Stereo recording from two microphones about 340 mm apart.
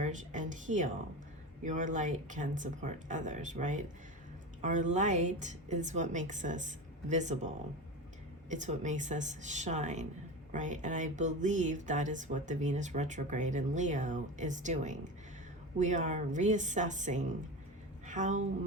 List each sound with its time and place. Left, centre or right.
0.0 s a woman's voice: right